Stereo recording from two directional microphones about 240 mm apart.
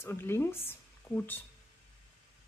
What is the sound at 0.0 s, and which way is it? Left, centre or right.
Speech, centre.